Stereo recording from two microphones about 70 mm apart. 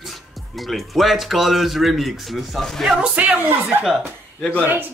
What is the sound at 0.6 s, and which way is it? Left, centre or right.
Speech, centre.